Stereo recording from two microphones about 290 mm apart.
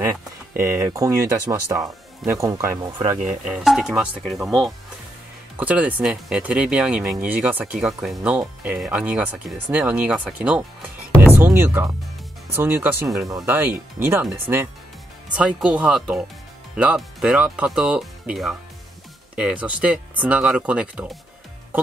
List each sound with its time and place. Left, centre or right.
0.6 s speech: centre